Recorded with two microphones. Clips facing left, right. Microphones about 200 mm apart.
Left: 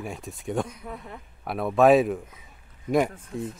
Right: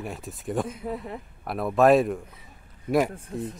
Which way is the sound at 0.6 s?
25° right (ahead or behind).